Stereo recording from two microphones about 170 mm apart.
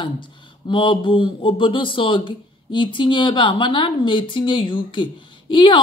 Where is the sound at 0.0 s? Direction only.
30° left (ahead or behind).